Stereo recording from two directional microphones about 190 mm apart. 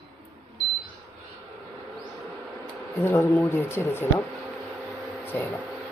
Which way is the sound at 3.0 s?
10° left (ahead or behind).